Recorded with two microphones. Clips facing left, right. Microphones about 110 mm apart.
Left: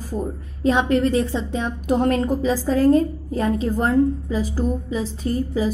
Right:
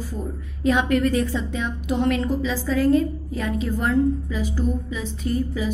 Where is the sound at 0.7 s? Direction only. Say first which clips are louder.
Left 2 dB; 30° left (ahead or behind).